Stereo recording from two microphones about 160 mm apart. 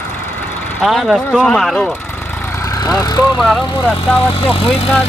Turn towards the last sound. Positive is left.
turn(degrees=35)  # may be behind; listen again after turning